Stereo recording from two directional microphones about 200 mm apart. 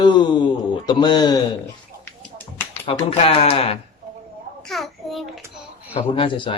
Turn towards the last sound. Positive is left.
turn(degrees=25)  # may be behind; listen again after turning